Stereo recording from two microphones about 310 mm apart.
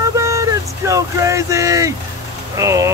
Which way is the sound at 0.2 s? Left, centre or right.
Centre.